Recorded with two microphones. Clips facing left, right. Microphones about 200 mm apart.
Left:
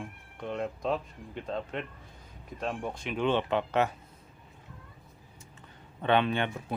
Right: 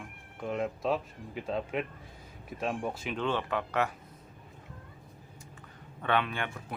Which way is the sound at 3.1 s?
15° left (ahead or behind).